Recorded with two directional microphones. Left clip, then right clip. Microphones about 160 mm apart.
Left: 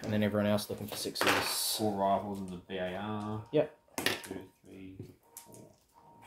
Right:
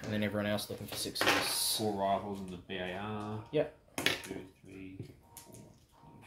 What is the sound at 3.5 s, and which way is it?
Speech, 60° left (ahead or behind).